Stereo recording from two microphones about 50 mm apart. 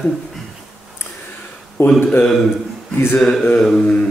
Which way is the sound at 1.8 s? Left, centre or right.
Left.